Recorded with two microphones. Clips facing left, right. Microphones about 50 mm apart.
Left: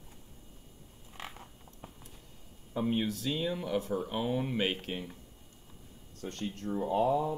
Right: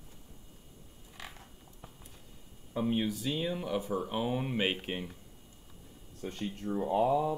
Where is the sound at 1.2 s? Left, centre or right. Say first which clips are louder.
Left 3 dB; left.